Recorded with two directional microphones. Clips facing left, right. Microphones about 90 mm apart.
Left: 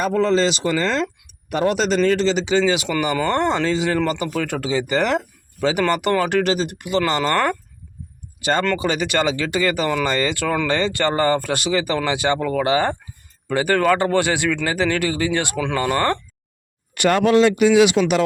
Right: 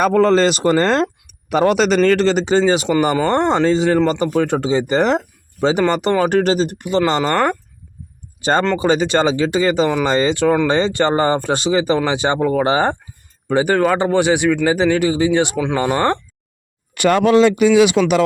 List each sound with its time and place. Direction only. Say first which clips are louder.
0.0 s speech: right 5 dB; 55° right (ahead or behind)
1.5 s speech: right 5 dB; 80° right
2.0 s speech: right 4 dB; 55° right (ahead or behind); by 7.0 s 35° right (ahead or behind)
7.0 s speech: right 3 dB; 20° right (ahead or behind)
8.4 s speech: right 4 dB; 30° right (ahead or behind)
13.5 s speech: right 2 dB; 20° right (ahead or behind)
18.0 s speech: right 3 dB; 90° right